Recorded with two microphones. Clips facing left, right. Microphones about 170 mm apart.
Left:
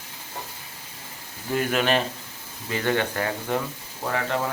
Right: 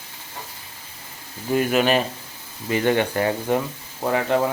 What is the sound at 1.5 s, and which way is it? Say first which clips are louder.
Speech: right 4 dB; 5° right (ahead or behind).